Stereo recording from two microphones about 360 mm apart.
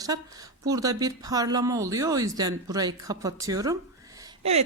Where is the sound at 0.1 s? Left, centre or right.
Centre.